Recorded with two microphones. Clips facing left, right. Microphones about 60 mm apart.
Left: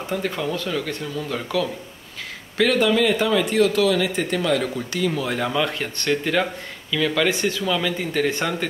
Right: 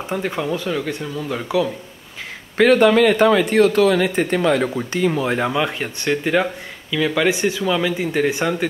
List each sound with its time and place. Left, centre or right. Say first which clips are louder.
0.1 s speech: right 2 dB; centre
2.5 s speech: right 6 dB; right
5.5 s speech: right 2 dB; centre